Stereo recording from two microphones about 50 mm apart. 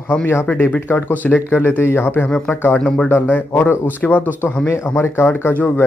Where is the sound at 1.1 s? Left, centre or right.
Left.